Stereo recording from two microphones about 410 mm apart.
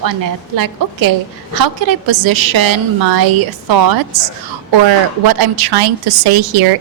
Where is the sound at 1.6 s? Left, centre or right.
Right.